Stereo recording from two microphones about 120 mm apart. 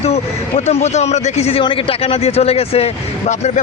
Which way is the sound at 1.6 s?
50° left (ahead or behind).